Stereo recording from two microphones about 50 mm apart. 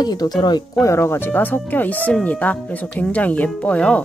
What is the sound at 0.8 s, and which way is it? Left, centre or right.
Speech, left.